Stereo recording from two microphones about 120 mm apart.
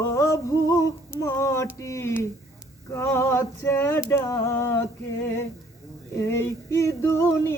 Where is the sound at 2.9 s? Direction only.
20° left (ahead or behind).